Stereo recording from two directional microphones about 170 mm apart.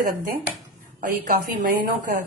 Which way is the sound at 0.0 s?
55° right (ahead or behind).